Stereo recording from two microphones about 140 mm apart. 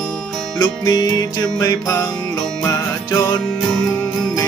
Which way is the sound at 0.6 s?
30° left (ahead or behind).